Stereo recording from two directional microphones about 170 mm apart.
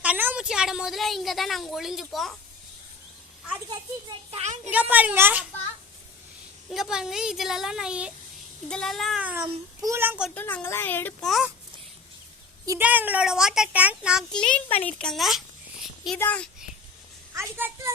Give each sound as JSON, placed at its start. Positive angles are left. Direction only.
{"t": 0.0, "sound": "a woman's voice", "side_deg": -10}
{"t": 4.3, "sound": "a woman's voice", "side_deg": -40}
{"t": 4.7, "sound": "speech", "side_deg": -10}
{"t": 6.7, "sound": "speech", "side_deg": 0}
{"t": 9.2, "sound": "speech", "side_deg": -10}
{"t": 10.3, "sound": "speech", "side_deg": 10}
{"t": 11.3, "sound": "speech", "side_deg": 0}
{"t": 12.6, "sound": "speech", "side_deg": -15}
{"t": 14.3, "sound": "speech", "side_deg": 5}
{"t": 16.1, "sound": "speech", "side_deg": 10}
{"t": 17.3, "sound": "speech", "side_deg": -15}